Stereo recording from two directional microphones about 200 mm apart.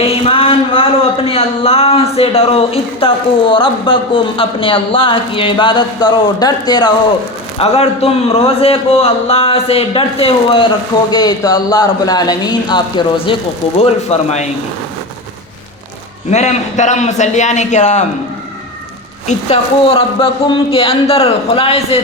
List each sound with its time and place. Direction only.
0.0 s a sound: 25° left (ahead or behind)
1.3 s a man's voice: 30° left (ahead or behind)
16.3 s a man's voice: 35° left (ahead or behind)
19.3 s speech: 30° left (ahead or behind)